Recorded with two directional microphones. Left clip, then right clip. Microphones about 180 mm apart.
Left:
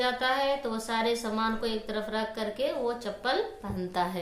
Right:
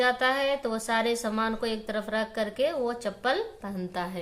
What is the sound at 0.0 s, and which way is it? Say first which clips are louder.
A woman's voice: right 3 dB; 15° right (ahead or behind).